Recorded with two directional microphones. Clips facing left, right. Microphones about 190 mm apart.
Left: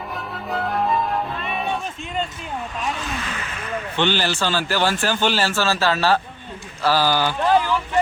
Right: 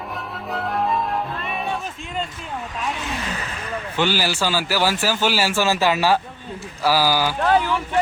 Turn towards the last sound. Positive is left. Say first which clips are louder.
# even
turn(degrees=-5)  # may be behind; listen again after turning